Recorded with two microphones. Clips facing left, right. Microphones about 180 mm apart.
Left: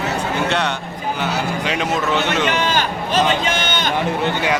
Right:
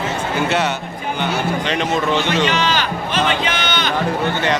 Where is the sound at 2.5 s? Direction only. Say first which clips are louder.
Even; 50° left (ahead or behind).